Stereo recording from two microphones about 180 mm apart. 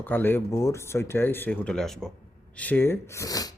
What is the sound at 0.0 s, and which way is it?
Speech, 10° left (ahead or behind).